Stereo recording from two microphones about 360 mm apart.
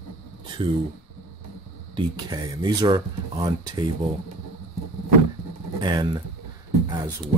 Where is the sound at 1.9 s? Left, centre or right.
Centre.